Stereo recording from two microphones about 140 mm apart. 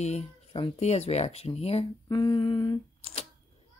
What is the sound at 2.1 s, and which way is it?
Humming, 30° left (ahead or behind).